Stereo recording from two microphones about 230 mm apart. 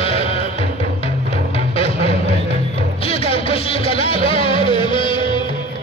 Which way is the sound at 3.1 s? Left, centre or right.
Left.